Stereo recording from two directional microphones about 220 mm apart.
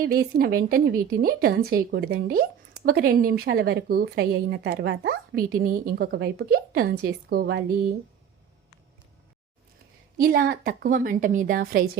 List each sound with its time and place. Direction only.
0.0 s a woman's voice: 40° right (ahead or behind)
10.2 s a woman's voice: 40° right (ahead or behind)